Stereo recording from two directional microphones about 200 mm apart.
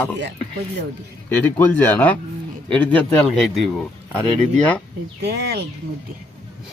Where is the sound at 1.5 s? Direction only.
10° left (ahead or behind).